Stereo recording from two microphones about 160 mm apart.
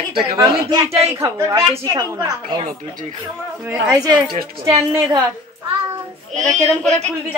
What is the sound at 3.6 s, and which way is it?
Speech, 15° right (ahead or behind).